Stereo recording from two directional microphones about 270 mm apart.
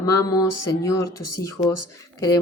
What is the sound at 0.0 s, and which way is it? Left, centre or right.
Speech, centre.